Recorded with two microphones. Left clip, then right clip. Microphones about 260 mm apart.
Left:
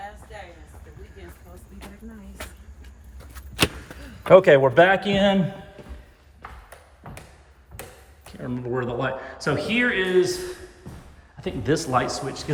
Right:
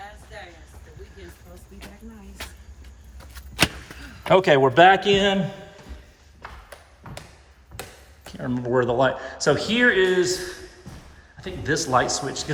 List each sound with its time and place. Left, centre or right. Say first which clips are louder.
2.4 s vehicle: right 1 dB; centre
4.2 s speech: left 3 dB; centre
8.2 s speech: right 3 dB; centre